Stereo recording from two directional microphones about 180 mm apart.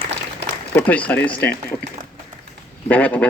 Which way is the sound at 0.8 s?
10° left (ahead or behind).